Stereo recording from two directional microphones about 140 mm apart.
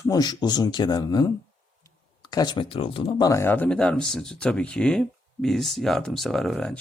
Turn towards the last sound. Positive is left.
turn(degrees=5)  # may be behind; listen again after turning